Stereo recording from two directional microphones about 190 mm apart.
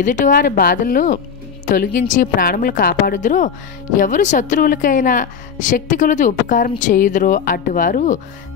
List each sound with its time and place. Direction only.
0.0 s a woman's voice: 45° left (ahead or behind)